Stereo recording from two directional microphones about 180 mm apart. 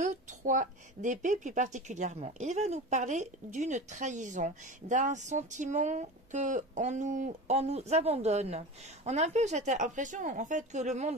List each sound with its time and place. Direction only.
0.0 s a woman's voice: 45° right (ahead or behind)